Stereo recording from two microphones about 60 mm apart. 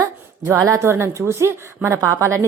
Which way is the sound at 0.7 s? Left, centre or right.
Right.